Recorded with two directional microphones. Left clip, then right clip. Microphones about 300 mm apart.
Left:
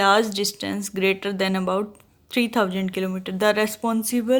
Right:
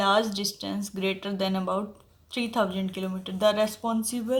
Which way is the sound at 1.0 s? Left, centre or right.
Left.